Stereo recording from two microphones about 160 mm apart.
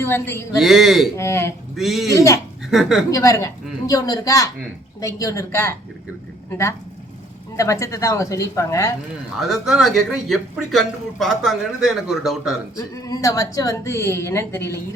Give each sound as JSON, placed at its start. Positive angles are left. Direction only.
{"t": 0.0, "sound": "a woman's voice", "side_deg": 15}
{"t": 0.5, "sound": "speech", "side_deg": 0}
{"t": 1.1, "sound": "a woman's voice", "side_deg": 15}
{"t": 1.7, "sound": "speech", "side_deg": 0}
{"t": 2.1, "sound": "speech", "side_deg": 20}
{"t": 2.6, "sound": "a woman's voice", "side_deg": 0}
{"t": 3.1, "sound": "a woman's voice", "side_deg": 20}
{"t": 9.4, "sound": "speech", "side_deg": -5}
{"t": 12.7, "sound": "a woman's voice", "side_deg": 20}